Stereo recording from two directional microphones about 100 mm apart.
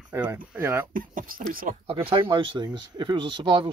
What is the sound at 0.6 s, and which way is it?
Speech, 25° right (ahead or behind).